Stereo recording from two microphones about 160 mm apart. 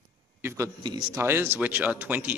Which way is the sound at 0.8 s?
30° right (ahead or behind).